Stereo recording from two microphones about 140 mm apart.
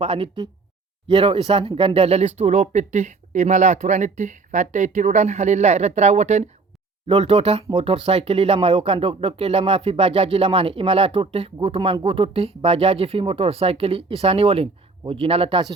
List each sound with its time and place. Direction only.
0.0 s speech: 40° right (ahead or behind)